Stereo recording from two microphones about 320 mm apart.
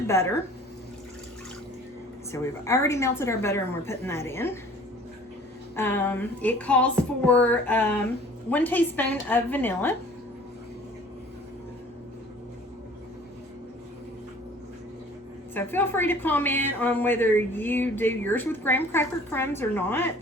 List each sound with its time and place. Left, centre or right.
2.3 s a woman's voice: centre
5.7 s speech: centre
15.5 s a woman's voice: centre